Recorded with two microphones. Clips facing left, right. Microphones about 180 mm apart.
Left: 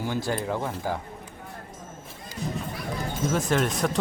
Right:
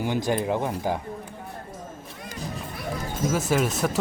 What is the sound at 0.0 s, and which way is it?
Speech, 20° right (ahead or behind).